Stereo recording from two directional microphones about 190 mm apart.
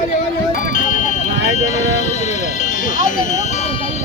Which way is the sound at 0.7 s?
45° left (ahead or behind).